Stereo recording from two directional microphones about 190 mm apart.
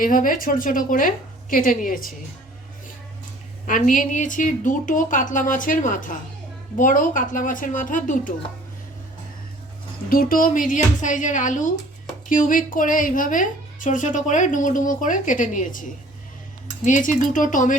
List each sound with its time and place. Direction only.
0.0 s speech: 45° left (ahead or behind)
3.7 s speech: 45° left (ahead or behind)
10.1 s speech: 50° left (ahead or behind)
16.8 s speech: 40° left (ahead or behind)